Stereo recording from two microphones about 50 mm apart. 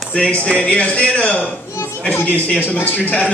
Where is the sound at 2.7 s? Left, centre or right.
Left.